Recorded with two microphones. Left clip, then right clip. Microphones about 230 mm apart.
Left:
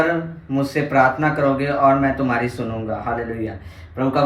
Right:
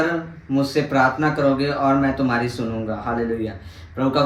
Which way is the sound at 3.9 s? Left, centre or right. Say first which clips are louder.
Even; right.